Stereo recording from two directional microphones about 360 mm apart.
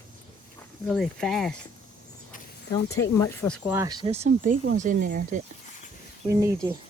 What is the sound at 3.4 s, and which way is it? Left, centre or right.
Speech, centre.